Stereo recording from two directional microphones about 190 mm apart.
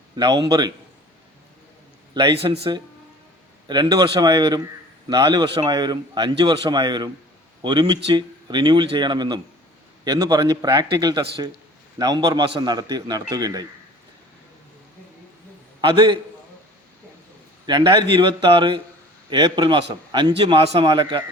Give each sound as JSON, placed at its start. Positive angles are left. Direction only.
{"t": 0.2, "sound": "speech", "side_deg": -20}
{"t": 2.4, "sound": "speech", "side_deg": -30}
{"t": 15.8, "sound": "speech", "side_deg": -25}
{"t": 17.7, "sound": "speech", "side_deg": -25}